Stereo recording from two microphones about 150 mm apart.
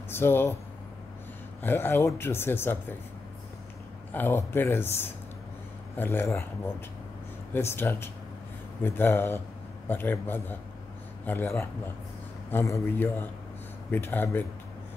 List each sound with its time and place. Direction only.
0.1 s speech: 15° left (ahead or behind)
1.6 s speech: 15° left (ahead or behind)
4.1 s speech: 15° left (ahead or behind)